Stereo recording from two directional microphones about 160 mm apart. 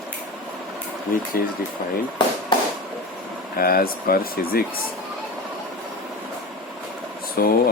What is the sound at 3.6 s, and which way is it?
Speech, 65° left (ahead or behind).